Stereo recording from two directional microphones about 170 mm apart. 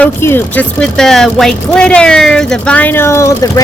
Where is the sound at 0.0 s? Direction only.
15° left (ahead or behind).